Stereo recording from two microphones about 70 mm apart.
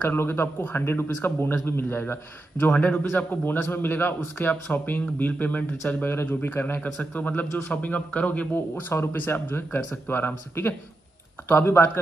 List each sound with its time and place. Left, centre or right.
0.0 s speech: left